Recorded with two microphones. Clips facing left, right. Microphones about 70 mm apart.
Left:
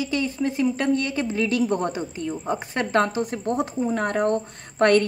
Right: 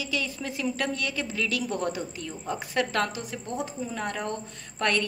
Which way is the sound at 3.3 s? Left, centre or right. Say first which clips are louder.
Left 8 dB; left.